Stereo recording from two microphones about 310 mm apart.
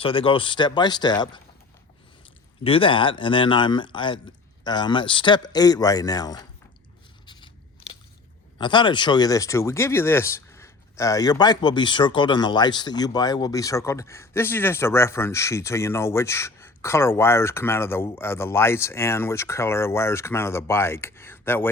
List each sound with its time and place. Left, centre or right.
0.0 s speech: centre
2.6 s speech: centre
8.5 s speech: centre